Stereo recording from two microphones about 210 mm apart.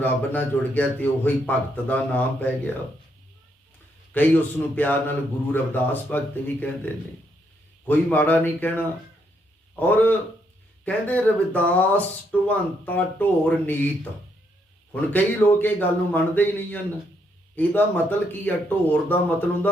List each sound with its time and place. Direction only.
0.0 s speech: 10° left (ahead or behind)
4.1 s speech: 10° left (ahead or behind)
15.1 s speech: 10° left (ahead or behind)